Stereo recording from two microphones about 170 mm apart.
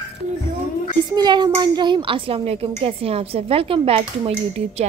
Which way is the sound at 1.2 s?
25° right (ahead or behind).